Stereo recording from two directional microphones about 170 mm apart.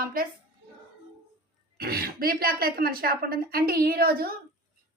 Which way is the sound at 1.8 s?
65° right (ahead or behind).